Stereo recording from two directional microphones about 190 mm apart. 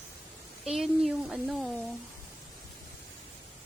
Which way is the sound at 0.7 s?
Centre (ahead or behind).